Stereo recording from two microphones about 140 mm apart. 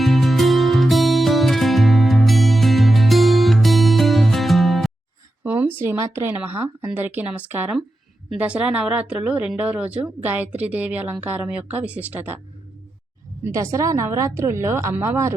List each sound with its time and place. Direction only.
0.0 s music: centre (ahead or behind)
5.4 s speech: 15° right (ahead or behind)
13.4 s a woman's voice: 20° right (ahead or behind)